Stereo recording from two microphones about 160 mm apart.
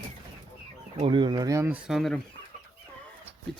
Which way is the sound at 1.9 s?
Centre (ahead or behind).